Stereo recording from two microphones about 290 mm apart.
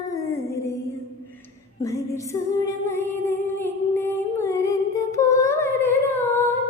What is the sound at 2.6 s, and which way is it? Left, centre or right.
Music, centre.